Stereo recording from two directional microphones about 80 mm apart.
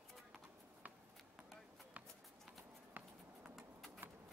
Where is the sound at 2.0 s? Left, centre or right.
Centre.